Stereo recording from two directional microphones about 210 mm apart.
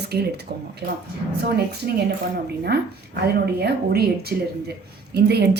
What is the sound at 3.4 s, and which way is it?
A woman's voice, 50° right (ahead or behind).